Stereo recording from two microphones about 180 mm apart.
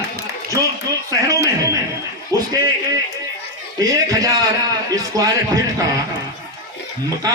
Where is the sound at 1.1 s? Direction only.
20° right (ahead or behind).